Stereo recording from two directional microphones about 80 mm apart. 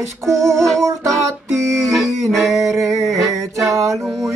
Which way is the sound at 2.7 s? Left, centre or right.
Right.